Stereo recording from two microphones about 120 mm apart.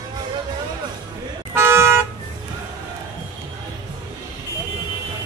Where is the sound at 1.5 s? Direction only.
20° right (ahead or behind).